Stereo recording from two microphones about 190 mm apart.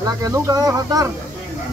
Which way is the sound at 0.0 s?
20° right (ahead or behind).